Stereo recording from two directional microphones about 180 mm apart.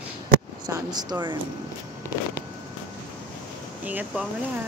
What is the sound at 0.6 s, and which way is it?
Speech, 20° right (ahead or behind).